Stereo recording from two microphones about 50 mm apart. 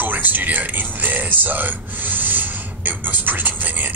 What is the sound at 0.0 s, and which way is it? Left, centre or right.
Speech, right.